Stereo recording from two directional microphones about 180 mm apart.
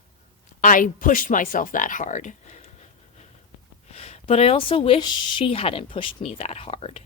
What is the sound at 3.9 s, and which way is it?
Speech, 35° left (ahead or behind).